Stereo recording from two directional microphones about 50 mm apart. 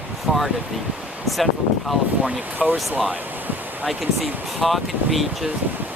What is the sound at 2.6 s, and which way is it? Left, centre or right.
Speech, right.